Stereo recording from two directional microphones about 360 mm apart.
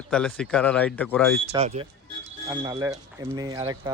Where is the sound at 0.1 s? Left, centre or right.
Centre.